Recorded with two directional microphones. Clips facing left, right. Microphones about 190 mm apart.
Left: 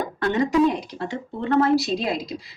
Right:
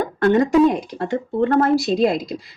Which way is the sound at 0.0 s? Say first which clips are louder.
Right 6 dB; 50° right (ahead or behind).